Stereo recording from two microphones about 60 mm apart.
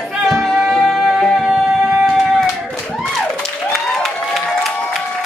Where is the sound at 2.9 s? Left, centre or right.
Left.